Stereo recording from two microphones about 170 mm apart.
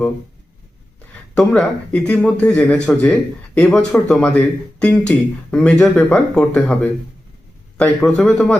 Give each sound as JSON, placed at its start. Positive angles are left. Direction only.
{"t": 1.4, "sound": "speech", "side_deg": 5}
{"t": 7.8, "sound": "speech", "side_deg": 5}